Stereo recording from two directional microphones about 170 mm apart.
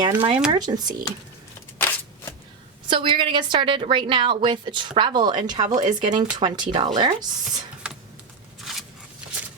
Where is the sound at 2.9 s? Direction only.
25° right (ahead or behind).